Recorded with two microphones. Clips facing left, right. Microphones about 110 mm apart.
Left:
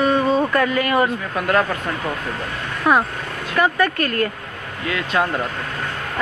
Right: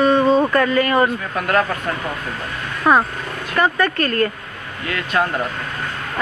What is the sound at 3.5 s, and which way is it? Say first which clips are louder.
Speech: even; 5° left (ahead or behind).